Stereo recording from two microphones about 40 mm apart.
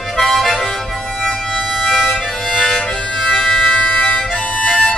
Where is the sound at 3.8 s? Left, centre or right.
Left.